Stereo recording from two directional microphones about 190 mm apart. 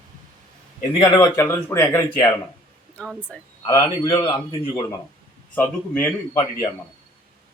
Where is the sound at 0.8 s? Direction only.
30° left (ahead or behind); by 3.3 s 5° left (ahead or behind).